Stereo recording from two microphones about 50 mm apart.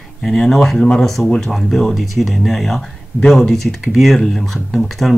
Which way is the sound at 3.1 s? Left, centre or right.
Right.